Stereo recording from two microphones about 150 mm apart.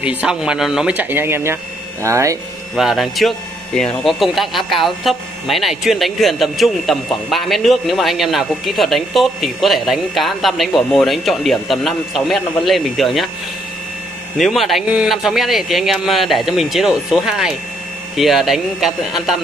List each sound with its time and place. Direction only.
0.0 s speech: 10° right (ahead or behind)
2.7 s speech: centre (ahead or behind)
14.4 s speech: centre (ahead or behind)